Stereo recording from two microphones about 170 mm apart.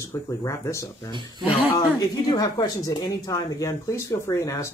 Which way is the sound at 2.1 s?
20° left (ahead or behind).